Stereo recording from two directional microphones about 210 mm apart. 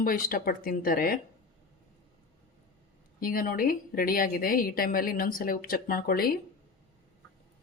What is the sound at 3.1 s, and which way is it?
A woman's voice, 40° left (ahead or behind).